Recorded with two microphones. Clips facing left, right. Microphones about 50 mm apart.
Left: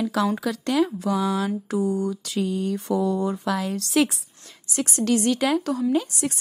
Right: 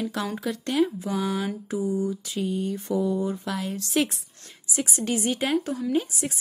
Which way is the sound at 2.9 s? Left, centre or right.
Left.